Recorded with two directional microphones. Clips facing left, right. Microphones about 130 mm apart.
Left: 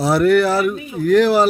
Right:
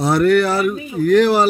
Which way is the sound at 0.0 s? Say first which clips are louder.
Even; centre (ahead or behind).